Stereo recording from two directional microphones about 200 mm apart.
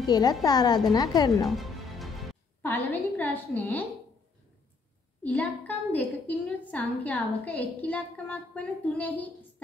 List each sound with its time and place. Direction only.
0.0 s a woman's voice: 20° left (ahead or behind)
1.4 s music: centre (ahead or behind)
2.6 s a woman's voice: 10° left (ahead or behind)
5.2 s a woman's voice: 10° left (ahead or behind)